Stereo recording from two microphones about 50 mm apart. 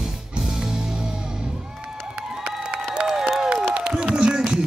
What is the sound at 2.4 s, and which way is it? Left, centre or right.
Applause, centre.